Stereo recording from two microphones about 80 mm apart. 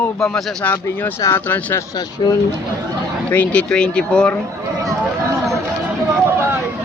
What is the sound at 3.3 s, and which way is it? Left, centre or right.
Speech, centre.